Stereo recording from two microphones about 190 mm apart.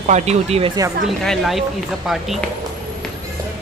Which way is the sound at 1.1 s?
Centre (ahead or behind).